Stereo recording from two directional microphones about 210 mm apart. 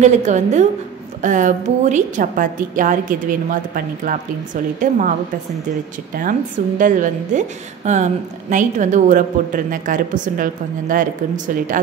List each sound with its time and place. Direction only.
0.0 s a woman's voice: 35° right (ahead or behind)
6.8 s a woman's voice: 35° right (ahead or behind)